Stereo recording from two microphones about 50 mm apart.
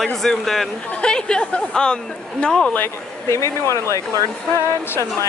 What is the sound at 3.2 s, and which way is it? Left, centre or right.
Speech, left.